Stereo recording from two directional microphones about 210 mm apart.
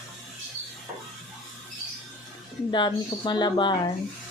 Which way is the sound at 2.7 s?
20° left (ahead or behind).